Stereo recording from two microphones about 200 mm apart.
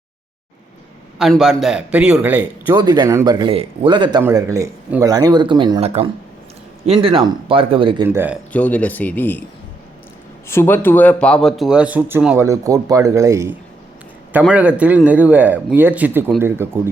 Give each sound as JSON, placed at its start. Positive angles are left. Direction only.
{"t": 1.2, "sound": "a man's voice", "side_deg": 0}
{"t": 4.2, "sound": "a man's voice", "side_deg": -15}
{"t": 8.0, "sound": "a man's voice", "side_deg": -10}
{"t": 8.5, "sound": "a man's voice", "side_deg": 5}
{"t": 10.5, "sound": "a man's voice", "side_deg": 10}